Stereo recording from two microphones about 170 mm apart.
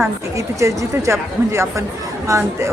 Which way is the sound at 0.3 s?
15° right (ahead or behind).